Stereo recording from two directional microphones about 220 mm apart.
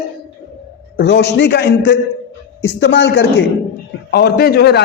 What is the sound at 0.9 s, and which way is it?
A man's voice, 50° left (ahead or behind).